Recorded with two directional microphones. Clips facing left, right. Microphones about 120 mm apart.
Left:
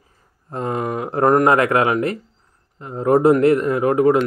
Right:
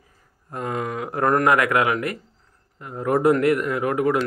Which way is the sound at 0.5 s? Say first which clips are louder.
Left 4 dB; 30° left (ahead or behind).